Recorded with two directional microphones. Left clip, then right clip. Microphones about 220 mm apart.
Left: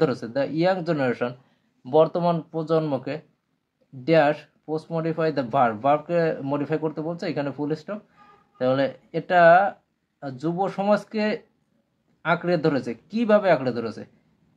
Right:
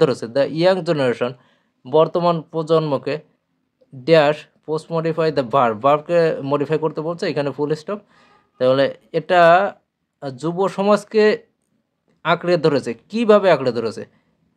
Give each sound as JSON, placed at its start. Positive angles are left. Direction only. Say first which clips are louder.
{"t": 0.0, "sound": "speech", "louder": "right 7 dB", "side_deg": -35}